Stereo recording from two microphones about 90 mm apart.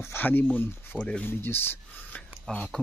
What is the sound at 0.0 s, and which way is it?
Speech, 25° left (ahead or behind).